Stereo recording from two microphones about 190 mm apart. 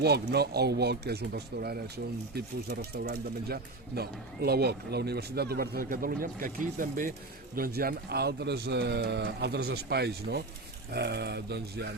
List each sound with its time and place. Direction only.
0.0 s speech: 60° right (ahead or behind)